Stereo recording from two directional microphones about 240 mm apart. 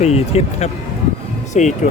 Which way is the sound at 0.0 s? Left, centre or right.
Left.